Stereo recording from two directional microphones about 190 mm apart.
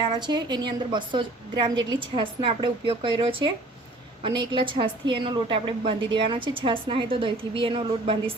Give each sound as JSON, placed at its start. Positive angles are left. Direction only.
{"t": 0.0, "sound": "a woman's voice", "side_deg": -25}